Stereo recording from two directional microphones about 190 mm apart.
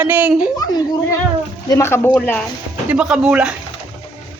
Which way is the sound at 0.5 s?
20° left (ahead or behind).